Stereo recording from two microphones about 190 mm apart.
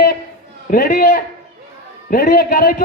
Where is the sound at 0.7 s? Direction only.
45° left (ahead or behind).